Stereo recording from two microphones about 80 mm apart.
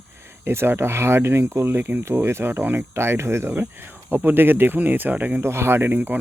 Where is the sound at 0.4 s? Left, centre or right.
Right.